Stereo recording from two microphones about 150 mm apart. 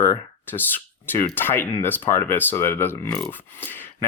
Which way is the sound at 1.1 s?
15° left (ahead or behind).